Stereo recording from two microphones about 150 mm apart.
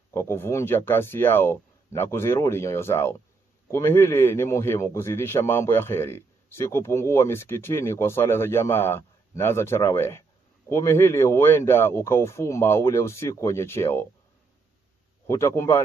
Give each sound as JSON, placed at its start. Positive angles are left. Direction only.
{"t": 0.1, "sound": "a man's voice", "side_deg": 15}
{"t": 15.2, "sound": "a man's voice", "side_deg": 20}